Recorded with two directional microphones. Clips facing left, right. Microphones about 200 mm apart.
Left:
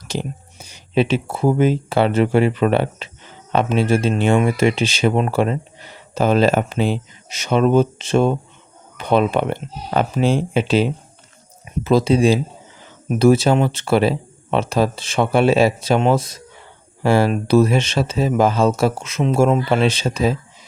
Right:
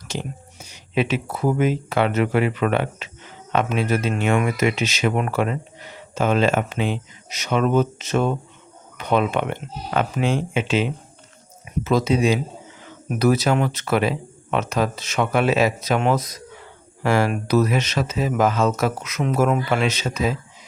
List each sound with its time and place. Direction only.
0.1 s speech: 35° left (ahead or behind)